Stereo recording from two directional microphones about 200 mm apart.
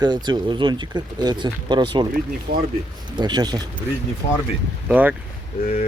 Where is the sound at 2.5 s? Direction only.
50° right (ahead or behind).